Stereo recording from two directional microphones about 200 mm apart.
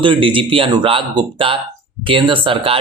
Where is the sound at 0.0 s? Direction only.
25° right (ahead or behind).